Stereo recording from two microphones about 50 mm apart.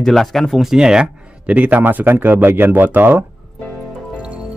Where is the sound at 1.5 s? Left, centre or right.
Right.